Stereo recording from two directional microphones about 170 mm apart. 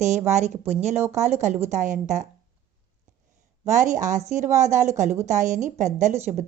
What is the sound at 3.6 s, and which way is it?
A woman's voice, 50° right (ahead or behind).